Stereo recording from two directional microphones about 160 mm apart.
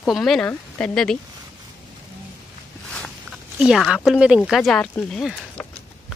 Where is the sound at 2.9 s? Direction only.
Centre (ahead or behind).